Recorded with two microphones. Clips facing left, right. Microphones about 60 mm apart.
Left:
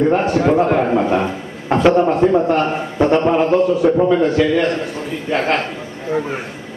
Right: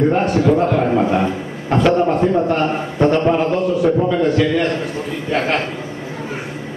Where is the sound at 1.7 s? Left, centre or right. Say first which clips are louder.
Left 2 dB; centre.